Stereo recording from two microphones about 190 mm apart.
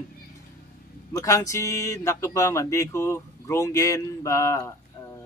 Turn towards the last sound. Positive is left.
turn(degrees=15)  # may be behind; listen again after turning